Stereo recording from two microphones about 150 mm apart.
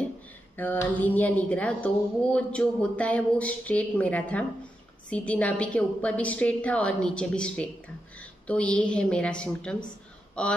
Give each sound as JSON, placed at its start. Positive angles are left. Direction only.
{"t": 0.6, "sound": "a woman's voice", "side_deg": 10}